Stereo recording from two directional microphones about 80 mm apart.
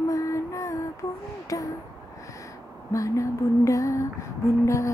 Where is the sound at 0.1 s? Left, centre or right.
Left.